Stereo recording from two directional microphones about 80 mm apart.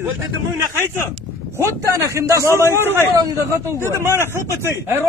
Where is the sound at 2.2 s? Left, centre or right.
Right.